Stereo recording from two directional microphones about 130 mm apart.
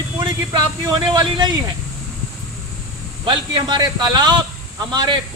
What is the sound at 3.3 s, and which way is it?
Speech, 35° right (ahead or behind).